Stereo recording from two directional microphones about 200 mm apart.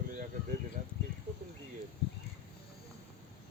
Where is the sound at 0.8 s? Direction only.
40° right (ahead or behind).